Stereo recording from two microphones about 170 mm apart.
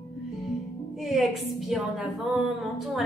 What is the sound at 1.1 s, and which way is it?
A woman's voice, centre (ahead or behind).